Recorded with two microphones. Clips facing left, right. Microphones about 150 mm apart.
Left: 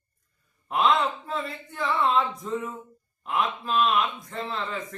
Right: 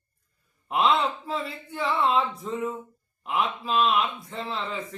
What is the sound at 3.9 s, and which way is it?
Speech, 30° right (ahead or behind).